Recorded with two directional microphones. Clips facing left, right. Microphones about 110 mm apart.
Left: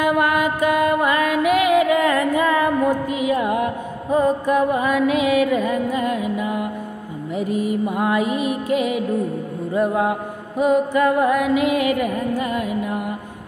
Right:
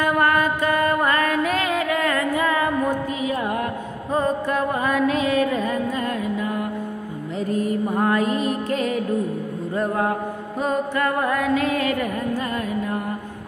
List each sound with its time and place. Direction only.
0.0 s music: 15° left (ahead or behind)